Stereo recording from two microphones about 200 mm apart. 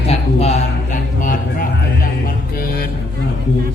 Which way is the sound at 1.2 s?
40° left (ahead or behind).